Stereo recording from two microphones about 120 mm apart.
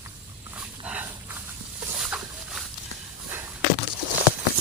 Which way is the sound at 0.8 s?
15° right (ahead or behind).